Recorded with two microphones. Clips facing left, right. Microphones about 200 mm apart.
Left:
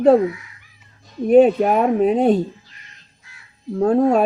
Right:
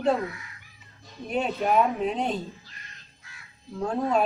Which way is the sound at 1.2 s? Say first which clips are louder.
Left 14 dB; 50° left (ahead or behind).